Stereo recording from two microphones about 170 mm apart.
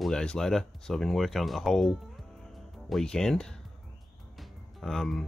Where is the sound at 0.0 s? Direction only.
5° left (ahead or behind).